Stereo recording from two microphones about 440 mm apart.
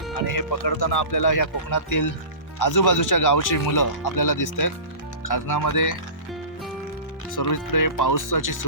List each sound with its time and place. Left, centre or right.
0.3 s speech: left
7.3 s speech: left